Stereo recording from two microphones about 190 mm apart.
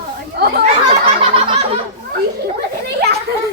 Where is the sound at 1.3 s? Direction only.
30° right (ahead or behind).